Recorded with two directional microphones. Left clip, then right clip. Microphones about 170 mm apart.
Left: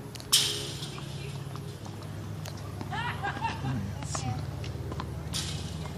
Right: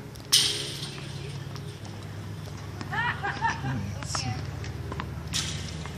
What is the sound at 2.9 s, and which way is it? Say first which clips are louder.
Vehicle: right 5 dB; 50° left (ahead or behind).